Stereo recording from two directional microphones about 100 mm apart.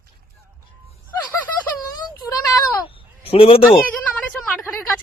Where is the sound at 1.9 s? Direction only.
40° left (ahead or behind).